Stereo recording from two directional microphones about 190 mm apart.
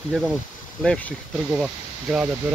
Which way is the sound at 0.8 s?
10° left (ahead or behind).